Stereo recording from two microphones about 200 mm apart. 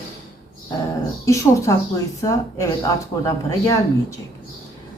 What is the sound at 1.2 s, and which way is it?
Speech, 15° left (ahead or behind).